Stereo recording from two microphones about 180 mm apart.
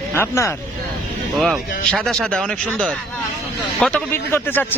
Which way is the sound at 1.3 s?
Centre (ahead or behind).